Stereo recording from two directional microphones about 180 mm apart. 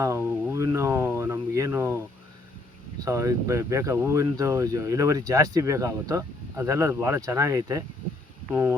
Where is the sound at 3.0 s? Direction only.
15° right (ahead or behind).